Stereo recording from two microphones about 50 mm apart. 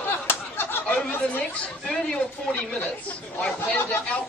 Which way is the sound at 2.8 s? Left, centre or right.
Left.